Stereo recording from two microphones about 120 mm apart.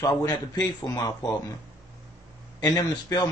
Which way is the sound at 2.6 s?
35° left (ahead or behind).